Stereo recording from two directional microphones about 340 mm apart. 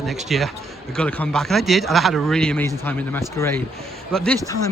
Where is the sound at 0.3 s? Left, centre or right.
Centre.